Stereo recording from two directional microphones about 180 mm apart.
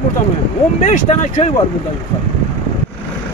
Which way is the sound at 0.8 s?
40° left (ahead or behind).